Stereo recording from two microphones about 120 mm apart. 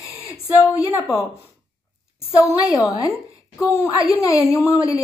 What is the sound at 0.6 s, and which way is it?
Speech, 20° left (ahead or behind).